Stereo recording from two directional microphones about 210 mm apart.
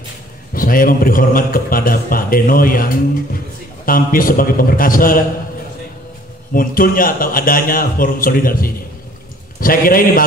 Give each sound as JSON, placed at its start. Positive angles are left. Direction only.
{"t": 0.6, "sound": "a man's voice", "side_deg": 40}
{"t": 6.5, "sound": "a man's voice", "side_deg": 40}